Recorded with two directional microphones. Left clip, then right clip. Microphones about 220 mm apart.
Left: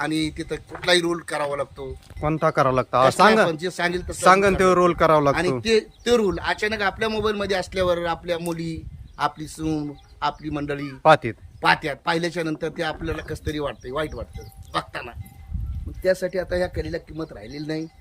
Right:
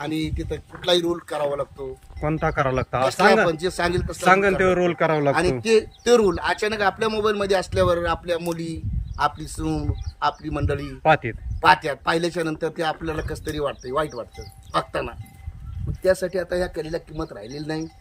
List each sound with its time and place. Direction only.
0.0 s a man's voice: centre (ahead or behind)
4.3 s a man's voice: 15° left (ahead or behind)
5.3 s a man's voice: 5° left (ahead or behind)
11.0 s a man's voice: 15° left (ahead or behind)
11.6 s a man's voice: centre (ahead or behind)